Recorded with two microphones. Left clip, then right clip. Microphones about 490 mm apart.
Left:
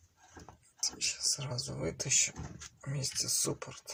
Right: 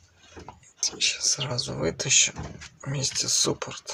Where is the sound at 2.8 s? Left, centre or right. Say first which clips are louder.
Right 9 dB; right.